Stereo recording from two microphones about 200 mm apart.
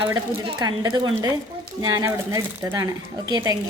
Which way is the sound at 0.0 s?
25° right (ahead or behind).